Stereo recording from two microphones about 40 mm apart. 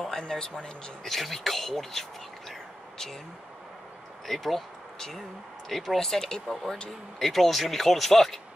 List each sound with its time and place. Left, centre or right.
0.2 s speech: left
1.0 s speech: centre
4.3 s speech: centre